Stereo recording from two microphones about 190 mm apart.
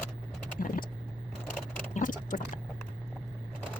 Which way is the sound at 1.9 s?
45° left (ahead or behind).